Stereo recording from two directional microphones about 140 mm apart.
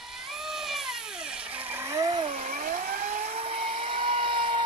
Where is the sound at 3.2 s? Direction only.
50° right (ahead or behind).